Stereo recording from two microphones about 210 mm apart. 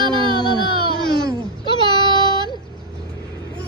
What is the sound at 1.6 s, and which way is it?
Child singing, 20° left (ahead or behind).